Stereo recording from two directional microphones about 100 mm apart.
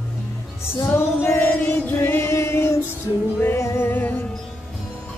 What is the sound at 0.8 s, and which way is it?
Music, 25° left (ahead or behind).